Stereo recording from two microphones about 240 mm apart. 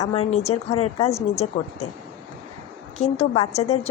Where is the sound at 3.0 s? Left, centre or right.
Left.